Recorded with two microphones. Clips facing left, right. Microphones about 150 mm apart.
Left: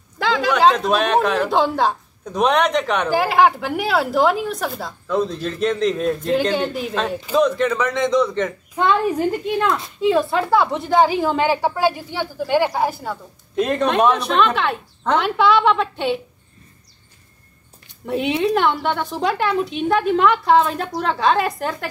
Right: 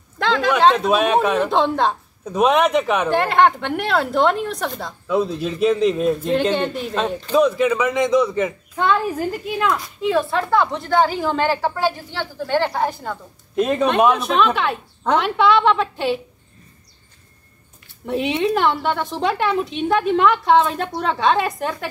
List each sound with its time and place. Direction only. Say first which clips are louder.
0.2 s speech: even; centre (ahead or behind)
8.8 s a woman's voice: left 1 dB; 15° left (ahead or behind)
9.1 s speech: left 4 dB; 5° right (ahead or behind)
11.0 s speech: left 2 dB; 15° left (ahead or behind)
18.0 s speech: even; centre (ahead or behind)